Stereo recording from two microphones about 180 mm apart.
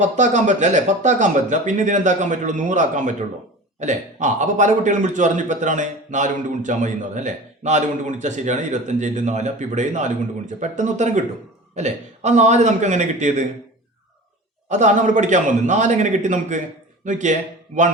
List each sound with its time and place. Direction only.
0.0 s a man's voice: 40° right (ahead or behind)
14.7 s a man's voice: 40° right (ahead or behind)